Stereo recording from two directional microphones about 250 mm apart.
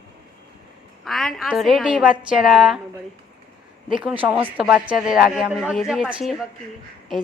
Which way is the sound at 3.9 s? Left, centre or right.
Centre.